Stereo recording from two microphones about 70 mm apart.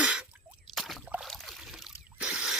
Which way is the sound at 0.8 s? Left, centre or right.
Centre.